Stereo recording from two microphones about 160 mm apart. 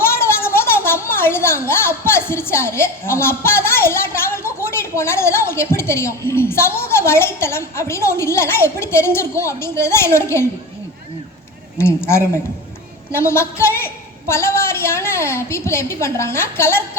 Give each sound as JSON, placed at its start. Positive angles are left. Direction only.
{"t": 0.0, "sound": "a woman's voice", "side_deg": 15}
{"t": 11.8, "sound": "a woman's voice", "side_deg": 15}